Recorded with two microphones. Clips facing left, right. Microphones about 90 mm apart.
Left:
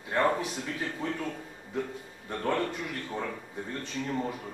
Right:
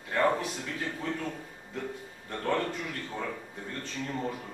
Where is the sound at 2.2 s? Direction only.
15° left (ahead or behind).